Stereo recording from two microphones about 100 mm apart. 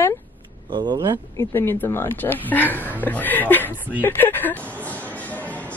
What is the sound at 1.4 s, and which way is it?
Speech, 25° left (ahead or behind).